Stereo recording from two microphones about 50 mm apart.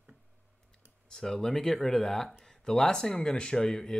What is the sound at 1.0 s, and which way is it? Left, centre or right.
Speech, centre.